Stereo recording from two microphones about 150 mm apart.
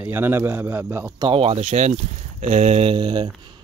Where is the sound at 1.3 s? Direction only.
40° right (ahead or behind).